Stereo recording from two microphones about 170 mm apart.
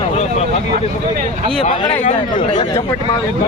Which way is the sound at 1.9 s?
45° left (ahead or behind).